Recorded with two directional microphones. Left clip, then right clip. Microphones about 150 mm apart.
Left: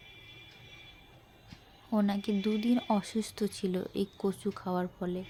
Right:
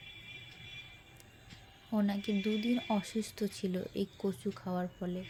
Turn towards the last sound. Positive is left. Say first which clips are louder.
# left 4 dB
turn(degrees=50)  # may be behind; listen again after turning